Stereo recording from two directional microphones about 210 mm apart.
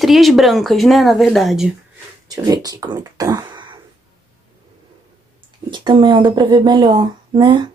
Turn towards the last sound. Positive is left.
turn(degrees=-20)  # may be behind; listen again after turning